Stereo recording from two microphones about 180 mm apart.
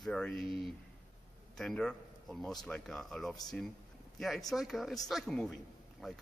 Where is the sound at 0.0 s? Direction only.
5° left (ahead or behind).